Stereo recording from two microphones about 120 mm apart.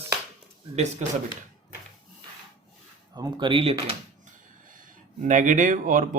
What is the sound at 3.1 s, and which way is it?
Speech, 40° right (ahead or behind).